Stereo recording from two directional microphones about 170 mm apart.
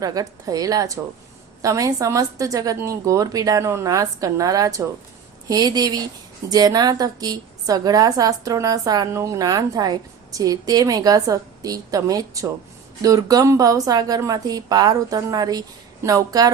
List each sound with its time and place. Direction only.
0.0 s a woman's voice: 20° right (ahead or behind)